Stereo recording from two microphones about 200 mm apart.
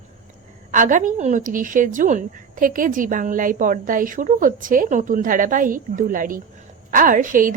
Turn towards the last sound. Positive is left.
turn(degrees=-40)  # may be behind; listen again after turning